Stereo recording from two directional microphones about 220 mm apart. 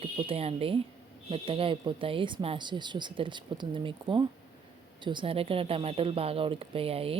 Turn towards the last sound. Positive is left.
turn(degrees=-25)  # may be behind; listen again after turning